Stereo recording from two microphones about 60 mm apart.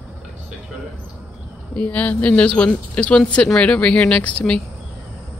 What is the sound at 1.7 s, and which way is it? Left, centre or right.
Speech, left.